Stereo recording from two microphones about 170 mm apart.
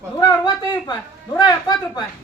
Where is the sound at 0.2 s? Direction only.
25° left (ahead or behind).